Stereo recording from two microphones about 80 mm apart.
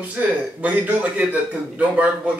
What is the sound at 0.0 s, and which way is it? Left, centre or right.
Speech, centre.